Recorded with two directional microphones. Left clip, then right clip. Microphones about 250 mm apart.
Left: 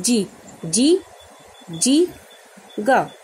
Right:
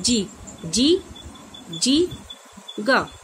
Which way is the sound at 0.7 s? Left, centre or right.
Centre.